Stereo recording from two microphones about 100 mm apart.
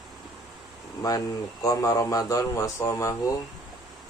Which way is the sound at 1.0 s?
35° left (ahead or behind).